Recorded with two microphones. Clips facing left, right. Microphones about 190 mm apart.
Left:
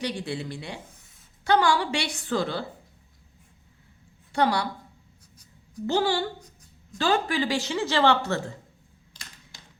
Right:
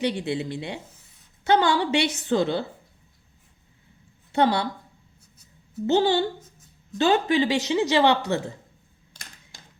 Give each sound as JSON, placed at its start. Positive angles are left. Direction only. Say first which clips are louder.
{"t": 0.0, "sound": "a woman's voice", "louder": "right 5 dB", "side_deg": -20}
{"t": 4.3, "sound": "a woman's voice", "louder": "right 3 dB", "side_deg": -20}
{"t": 5.8, "sound": "a woman's voice", "louder": "right 4 dB", "side_deg": -20}
{"t": 6.4, "sound": "a sound", "louder": "even", "side_deg": 0}
{"t": 7.0, "sound": "a woman's voice", "louder": "right 4 dB", "side_deg": -20}